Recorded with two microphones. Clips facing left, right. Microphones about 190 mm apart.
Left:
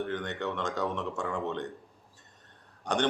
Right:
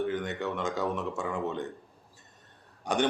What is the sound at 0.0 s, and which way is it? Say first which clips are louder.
Speech: right 2 dB; 5° right (ahead or behind).